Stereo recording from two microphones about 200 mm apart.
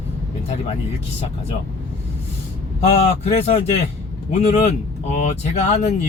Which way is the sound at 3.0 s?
30° left (ahead or behind).